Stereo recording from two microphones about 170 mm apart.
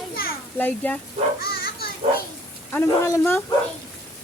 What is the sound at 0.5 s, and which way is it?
Speech, 10° left (ahead or behind).